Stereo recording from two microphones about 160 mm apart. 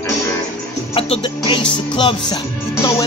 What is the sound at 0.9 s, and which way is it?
Music, 35° left (ahead or behind).